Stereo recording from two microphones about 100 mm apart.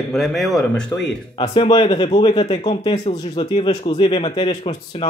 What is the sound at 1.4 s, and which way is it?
A man's voice, 55° left (ahead or behind).